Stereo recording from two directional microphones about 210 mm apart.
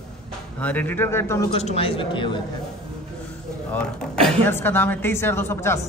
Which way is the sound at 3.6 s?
5° left (ahead or behind).